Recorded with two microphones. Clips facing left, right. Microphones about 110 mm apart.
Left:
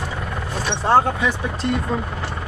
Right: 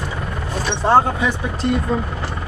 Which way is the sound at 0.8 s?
Centre (ahead or behind).